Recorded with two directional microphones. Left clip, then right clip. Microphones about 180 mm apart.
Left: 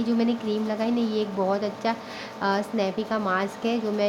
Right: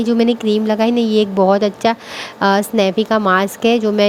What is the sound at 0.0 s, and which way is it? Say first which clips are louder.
A woman's voice: right 11 dB; 40° right (ahead or behind).